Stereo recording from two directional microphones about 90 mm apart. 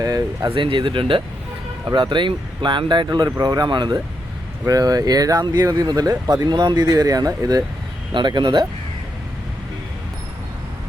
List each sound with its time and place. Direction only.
0.0 s speech: 45° right (ahead or behind)
0.5 s speech: 70° right (ahead or behind)
1.9 s speech: 60° right (ahead or behind)
3.2 s speech: 40° right (ahead or behind)
4.6 s speech: 45° right (ahead or behind)
8.1 s speech: 60° right (ahead or behind)